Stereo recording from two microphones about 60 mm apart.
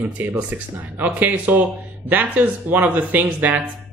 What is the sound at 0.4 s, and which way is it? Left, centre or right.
Speech, right.